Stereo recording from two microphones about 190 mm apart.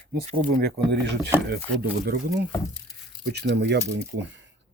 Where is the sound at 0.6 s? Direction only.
60° right (ahead or behind).